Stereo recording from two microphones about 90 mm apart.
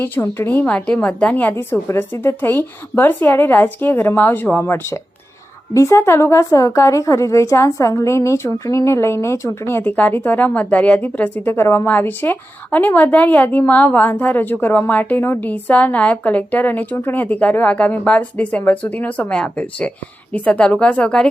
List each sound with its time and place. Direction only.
0.0 s a woman's voice: 25° left (ahead or behind)
1.7 s a woman's voice: 30° left (ahead or behind); by 21.2 s 10° left (ahead or behind)